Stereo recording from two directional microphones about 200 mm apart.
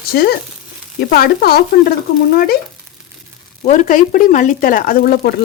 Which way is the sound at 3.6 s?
40° left (ahead or behind).